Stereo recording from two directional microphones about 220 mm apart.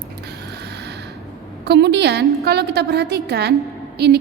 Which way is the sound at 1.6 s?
50° right (ahead or behind).